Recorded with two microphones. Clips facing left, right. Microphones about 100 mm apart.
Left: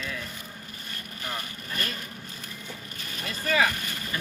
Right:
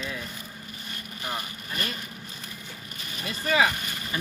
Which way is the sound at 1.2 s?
15° right (ahead or behind).